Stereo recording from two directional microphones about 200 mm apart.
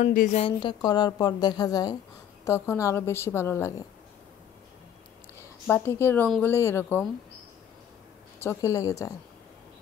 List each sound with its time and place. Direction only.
0.0 s a woman's voice: 40° left (ahead or behind)
0.4 s a woman's voice: 25° left (ahead or behind)
5.7 s a woman's voice: 10° left (ahead or behind)
8.5 s a woman's voice: 15° left (ahead or behind)